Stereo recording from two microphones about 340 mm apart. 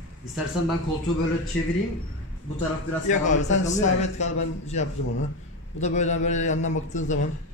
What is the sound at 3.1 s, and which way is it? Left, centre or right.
A man's voice, left.